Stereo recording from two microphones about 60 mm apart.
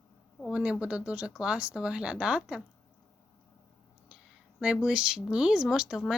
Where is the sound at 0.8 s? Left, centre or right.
Centre.